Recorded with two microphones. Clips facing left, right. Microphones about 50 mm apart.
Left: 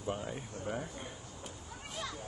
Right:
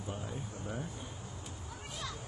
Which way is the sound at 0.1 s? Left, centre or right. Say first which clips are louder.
Left 5 dB; left.